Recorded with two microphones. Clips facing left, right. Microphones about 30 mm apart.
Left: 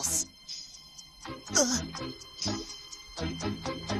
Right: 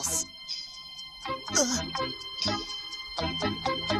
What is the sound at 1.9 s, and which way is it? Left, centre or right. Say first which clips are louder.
Music: right 7 dB; right.